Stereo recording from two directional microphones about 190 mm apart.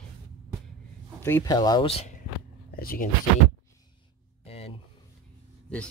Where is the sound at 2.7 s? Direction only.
50° left (ahead or behind).